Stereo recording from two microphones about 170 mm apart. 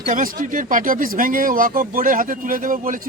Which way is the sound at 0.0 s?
55° right (ahead or behind).